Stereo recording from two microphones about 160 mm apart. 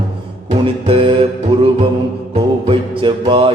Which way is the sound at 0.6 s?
35° right (ahead or behind).